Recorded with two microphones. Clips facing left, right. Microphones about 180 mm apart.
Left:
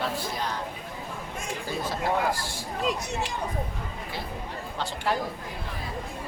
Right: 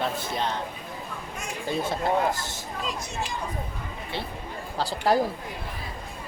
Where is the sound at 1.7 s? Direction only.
25° right (ahead or behind).